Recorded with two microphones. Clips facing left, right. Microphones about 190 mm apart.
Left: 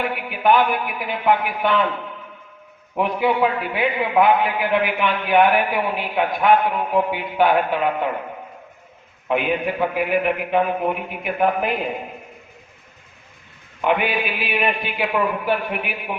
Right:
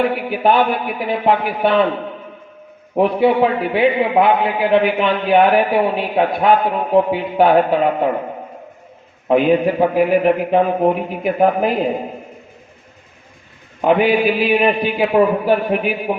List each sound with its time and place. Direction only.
0.0 s a man's voice: 35° right (ahead or behind)
2.9 s a man's voice: 35° right (ahead or behind)
9.2 s a man's voice: 35° right (ahead or behind)
13.8 s a man's voice: 35° right (ahead or behind)